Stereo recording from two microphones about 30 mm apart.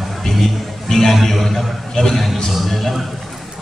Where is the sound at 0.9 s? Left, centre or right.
Centre.